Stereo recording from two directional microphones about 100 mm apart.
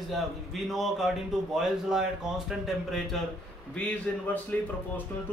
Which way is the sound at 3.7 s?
15° left (ahead or behind).